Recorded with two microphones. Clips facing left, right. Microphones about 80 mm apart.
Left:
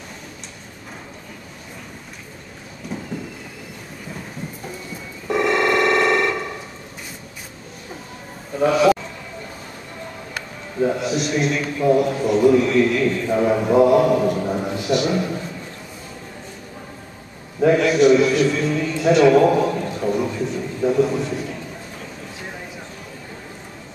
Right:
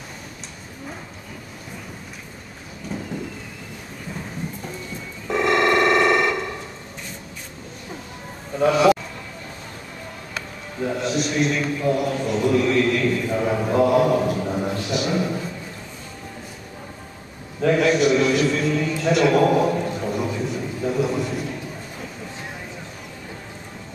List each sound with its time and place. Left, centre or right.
5.3 s telephone: centre
8.5 s a man's voice: centre
10.8 s a man's voice: centre
17.7 s a sound: centre